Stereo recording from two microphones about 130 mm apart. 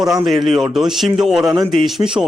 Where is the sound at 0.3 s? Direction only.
Centre (ahead or behind).